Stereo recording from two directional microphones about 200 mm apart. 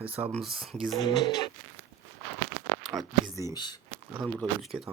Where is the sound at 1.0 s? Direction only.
20° left (ahead or behind).